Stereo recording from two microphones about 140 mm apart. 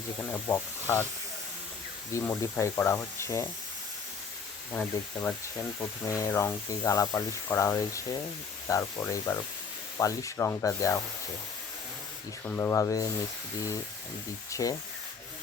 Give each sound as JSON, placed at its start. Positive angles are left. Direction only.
{"t": 0.3, "sound": "speech", "side_deg": 15}
{"t": 2.1, "sound": "speech", "side_deg": 20}
{"t": 4.7, "sound": "speech", "side_deg": 15}
{"t": 12.5, "sound": "speech", "side_deg": 15}
{"t": 14.5, "sound": "speech", "side_deg": 25}